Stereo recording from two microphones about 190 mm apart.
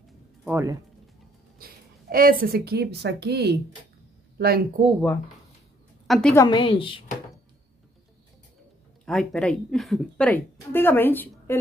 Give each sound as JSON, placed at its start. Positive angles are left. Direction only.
{"t": 0.5, "sound": "speech", "side_deg": -15}
{"t": 1.6, "sound": "a woman's voice", "side_deg": -50}
{"t": 6.0, "sound": "a woman's voice", "side_deg": 0}
{"t": 6.3, "sound": "a woman's voice", "side_deg": 20}
{"t": 9.0, "sound": "a woman's voice", "side_deg": 0}